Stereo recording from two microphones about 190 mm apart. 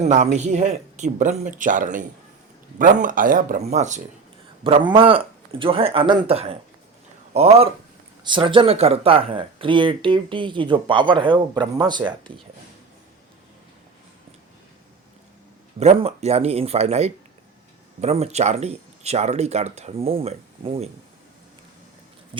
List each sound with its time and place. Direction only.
0.0 s speech: 35° right (ahead or behind)
4.6 s speech: 25° right (ahead or behind)
15.8 s speech: 35° right (ahead or behind)